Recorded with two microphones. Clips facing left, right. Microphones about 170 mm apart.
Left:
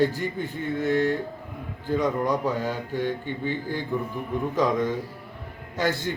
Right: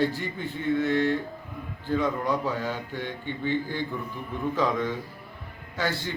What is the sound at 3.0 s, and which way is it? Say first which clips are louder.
Speech: left 5 dB; 40° left (ahead or behind).